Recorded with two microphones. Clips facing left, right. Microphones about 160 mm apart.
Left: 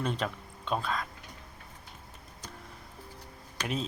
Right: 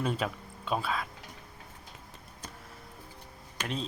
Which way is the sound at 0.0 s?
5° right (ahead or behind).